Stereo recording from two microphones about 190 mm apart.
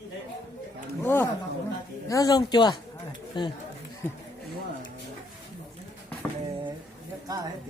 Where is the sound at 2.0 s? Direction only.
20° left (ahead or behind).